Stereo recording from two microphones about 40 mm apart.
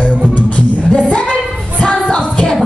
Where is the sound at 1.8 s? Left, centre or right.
Left.